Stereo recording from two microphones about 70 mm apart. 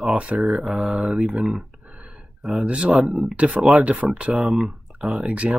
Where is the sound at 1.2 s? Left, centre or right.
Centre.